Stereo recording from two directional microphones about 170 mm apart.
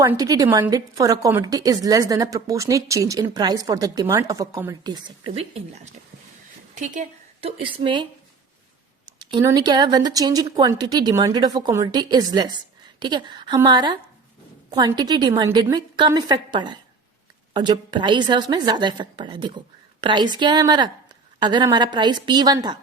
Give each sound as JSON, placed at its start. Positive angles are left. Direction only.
{"t": 0.0, "sound": "a woman's voice", "side_deg": -20}
{"t": 6.7, "sound": "speech", "side_deg": -45}
{"t": 7.4, "sound": "a woman's voice", "side_deg": -30}
{"t": 9.1, "sound": "a woman's voice", "side_deg": -20}